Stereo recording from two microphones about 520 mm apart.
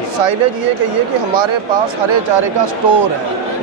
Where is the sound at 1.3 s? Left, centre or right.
Right.